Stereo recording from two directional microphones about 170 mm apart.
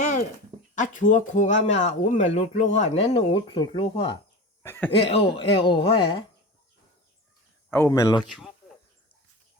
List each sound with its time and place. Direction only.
0.0 s a sound: 50° left (ahead or behind)
0.8 s speech: 50° left (ahead or behind); by 4.2 s 30° left (ahead or behind)
4.6 s speech: 15° left (ahead or behind)
4.9 s speech: 35° left (ahead or behind)
7.7 s speech: 15° left (ahead or behind)
8.3 s speech: centre (ahead or behind)